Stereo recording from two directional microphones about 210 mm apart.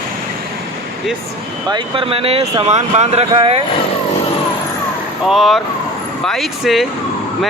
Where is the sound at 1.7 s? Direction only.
25° right (ahead or behind).